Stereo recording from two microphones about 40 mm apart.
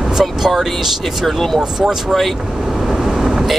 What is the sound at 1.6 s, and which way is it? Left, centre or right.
Speech, centre.